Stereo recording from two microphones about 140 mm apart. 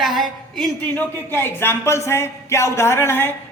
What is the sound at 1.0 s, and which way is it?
Speech, 15° left (ahead or behind).